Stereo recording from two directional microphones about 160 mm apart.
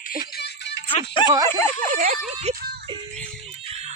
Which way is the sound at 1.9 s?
60° right (ahead or behind).